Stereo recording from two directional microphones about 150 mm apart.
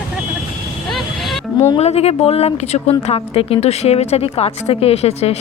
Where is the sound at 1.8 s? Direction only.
45° left (ahead or behind).